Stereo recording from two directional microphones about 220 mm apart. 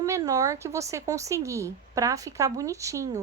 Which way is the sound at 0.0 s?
15° right (ahead or behind).